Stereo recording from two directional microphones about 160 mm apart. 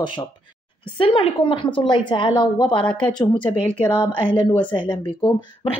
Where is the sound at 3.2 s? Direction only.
10° left (ahead or behind).